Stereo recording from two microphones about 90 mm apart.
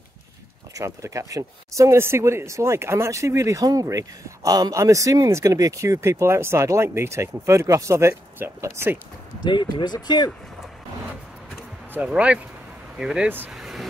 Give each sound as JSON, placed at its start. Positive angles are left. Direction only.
{"t": 0.7, "sound": "speech", "side_deg": -35}
{"t": 9.4, "sound": "speech", "side_deg": 60}
{"t": 11.9, "sound": "speech", "side_deg": -15}
{"t": 13.5, "sound": "vehicle", "side_deg": -5}